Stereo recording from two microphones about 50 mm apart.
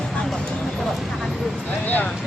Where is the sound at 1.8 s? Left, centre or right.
Left.